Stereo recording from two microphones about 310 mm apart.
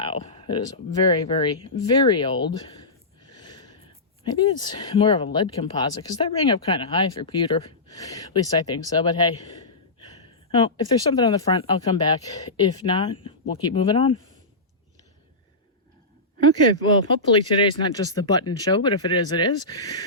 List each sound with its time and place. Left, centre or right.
0.0 s speech: centre
10.2 s a sound: centre
11.1 s speech: centre
16.4 s speech: centre